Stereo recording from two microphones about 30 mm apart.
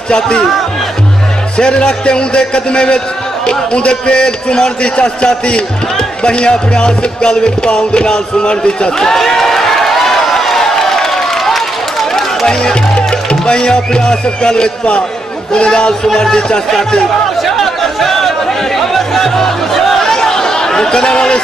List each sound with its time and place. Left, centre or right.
1.6 s a man's voice: left
8.9 s a sound: centre
12.6 s a man's voice: left
18.9 s music: centre
20.2 s chatter: centre